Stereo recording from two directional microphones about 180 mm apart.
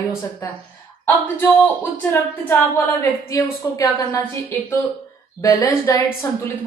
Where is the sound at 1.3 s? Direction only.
10° left (ahead or behind).